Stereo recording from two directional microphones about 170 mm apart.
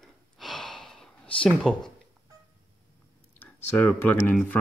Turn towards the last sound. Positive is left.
turn(degrees=10)  # may be behind; listen again after turning